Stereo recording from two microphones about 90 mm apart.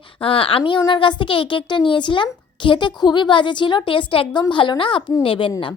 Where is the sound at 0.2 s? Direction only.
80° left.